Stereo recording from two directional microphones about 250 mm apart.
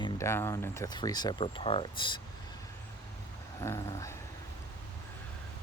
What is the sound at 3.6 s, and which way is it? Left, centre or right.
Speech, centre.